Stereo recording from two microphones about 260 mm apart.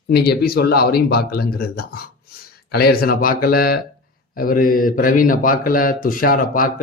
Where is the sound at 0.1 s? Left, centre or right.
Left.